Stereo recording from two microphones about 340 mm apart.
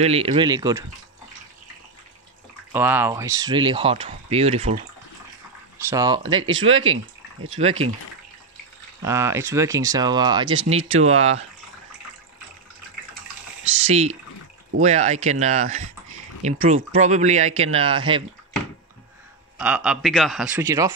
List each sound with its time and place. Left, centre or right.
0.0 s speech: centre
2.7 s speech: centre
5.9 s speech: centre
9.0 s speech: centre
10.8 s speech: right
11.1 s speech: centre
13.8 s speech: centre
19.6 s a man's voice: centre